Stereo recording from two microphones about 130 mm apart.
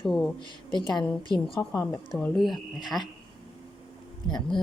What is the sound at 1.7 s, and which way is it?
Speech, 25° left (ahead or behind).